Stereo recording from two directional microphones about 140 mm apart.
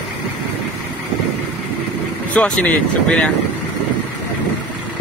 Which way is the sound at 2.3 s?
10° left (ahead or behind).